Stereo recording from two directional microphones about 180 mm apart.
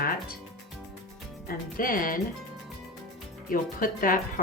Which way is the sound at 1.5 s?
50° left (ahead or behind).